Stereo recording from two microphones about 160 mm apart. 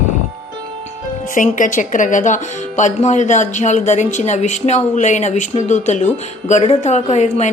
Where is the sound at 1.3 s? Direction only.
55° left (ahead or behind).